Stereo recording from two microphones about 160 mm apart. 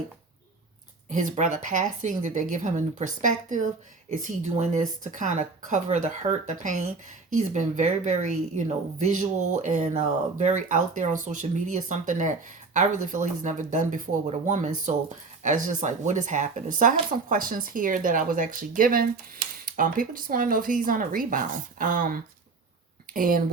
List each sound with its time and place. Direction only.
1.1 s speech: 50° right (ahead or behind)